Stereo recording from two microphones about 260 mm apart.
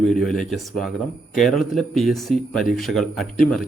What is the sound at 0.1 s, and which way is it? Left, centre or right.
Speech, centre.